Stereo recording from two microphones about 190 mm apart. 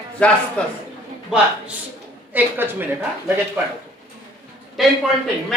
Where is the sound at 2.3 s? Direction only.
10° right (ahead or behind).